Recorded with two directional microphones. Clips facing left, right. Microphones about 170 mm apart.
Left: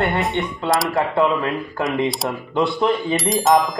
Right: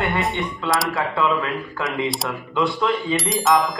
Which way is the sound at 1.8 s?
Centre (ahead or behind).